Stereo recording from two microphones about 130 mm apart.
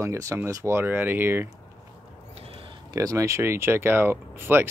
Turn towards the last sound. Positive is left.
turn(degrees=-15)  # may be behind; listen again after turning